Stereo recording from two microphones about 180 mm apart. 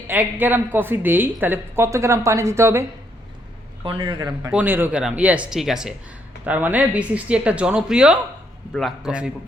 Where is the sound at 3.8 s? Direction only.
30° right (ahead or behind).